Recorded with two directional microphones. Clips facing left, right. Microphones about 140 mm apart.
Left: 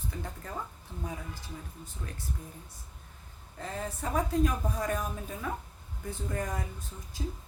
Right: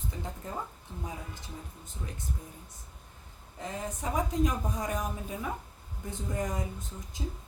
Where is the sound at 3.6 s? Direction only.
15° right (ahead or behind).